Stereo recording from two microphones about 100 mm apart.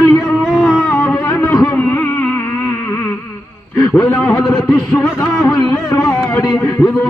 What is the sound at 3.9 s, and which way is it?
A man's voice, 10° left (ahead or behind).